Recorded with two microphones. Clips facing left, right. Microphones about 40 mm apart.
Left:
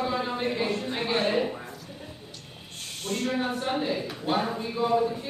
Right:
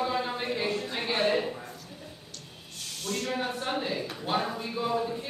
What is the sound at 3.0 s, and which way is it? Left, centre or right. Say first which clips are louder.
Speech: left 3 dB; left.